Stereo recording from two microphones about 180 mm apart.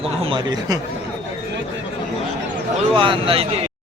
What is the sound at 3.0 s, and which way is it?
Speech, 30° right (ahead or behind).